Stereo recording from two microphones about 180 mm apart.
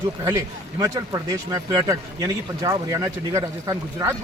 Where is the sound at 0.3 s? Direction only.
20° right (ahead or behind).